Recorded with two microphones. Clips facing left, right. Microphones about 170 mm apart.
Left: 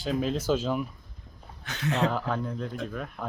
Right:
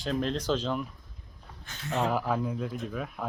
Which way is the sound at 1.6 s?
75° left (ahead or behind).